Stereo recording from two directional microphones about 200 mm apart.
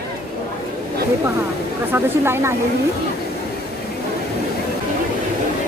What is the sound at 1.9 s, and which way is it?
Speech, 10° right (ahead or behind).